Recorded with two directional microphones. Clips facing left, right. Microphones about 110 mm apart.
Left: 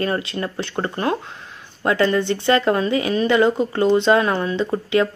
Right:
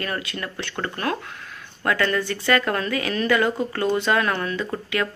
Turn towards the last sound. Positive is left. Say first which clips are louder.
# left 7 dB
turn(degrees=25)  # may be behind; listen again after turning